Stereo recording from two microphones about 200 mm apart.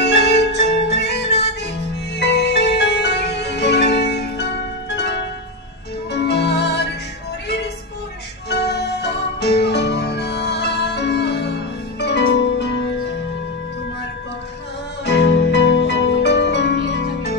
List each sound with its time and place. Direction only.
0.0 s music: 55° left (ahead or behind)
8.5 s music: 55° left (ahead or behind)
15.0 s music: 55° left (ahead or behind)